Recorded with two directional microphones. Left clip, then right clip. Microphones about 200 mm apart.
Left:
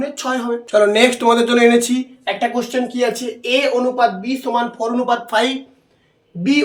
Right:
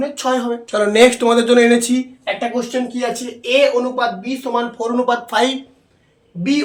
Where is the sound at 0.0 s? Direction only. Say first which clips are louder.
Right 3 dB; 10° right (ahead or behind).